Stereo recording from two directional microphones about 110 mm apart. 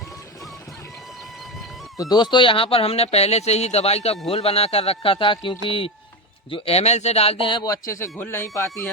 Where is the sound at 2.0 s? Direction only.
40° left (ahead or behind).